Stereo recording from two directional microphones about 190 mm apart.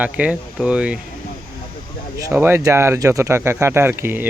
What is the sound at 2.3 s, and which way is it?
A man's voice, 10° right (ahead or behind).